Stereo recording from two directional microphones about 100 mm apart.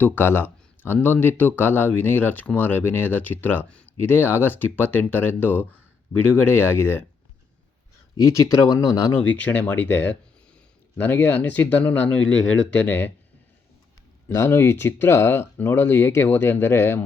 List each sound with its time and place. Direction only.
0.0 s speech: 20° left (ahead or behind)
8.1 s speech: 40° left (ahead or behind)
9.4 s speech: 15° left (ahead or behind)
14.3 s speech: 30° left (ahead or behind)